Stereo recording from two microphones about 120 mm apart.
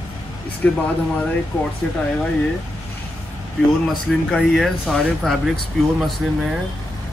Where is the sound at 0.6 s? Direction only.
10° left (ahead or behind).